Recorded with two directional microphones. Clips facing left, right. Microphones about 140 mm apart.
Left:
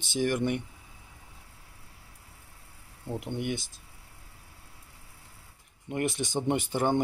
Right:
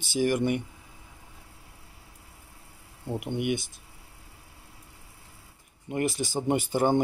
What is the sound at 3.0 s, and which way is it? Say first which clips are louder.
Speech: right 3 dB; 15° right (ahead or behind).